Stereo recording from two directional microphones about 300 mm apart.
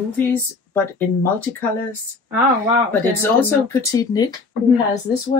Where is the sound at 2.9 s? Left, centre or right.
Centre.